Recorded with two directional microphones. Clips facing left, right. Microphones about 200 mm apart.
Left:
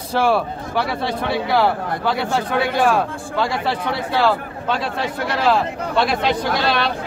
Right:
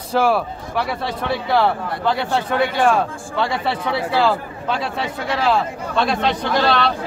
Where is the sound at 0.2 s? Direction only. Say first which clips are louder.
Left 1 dB; centre (ahead or behind).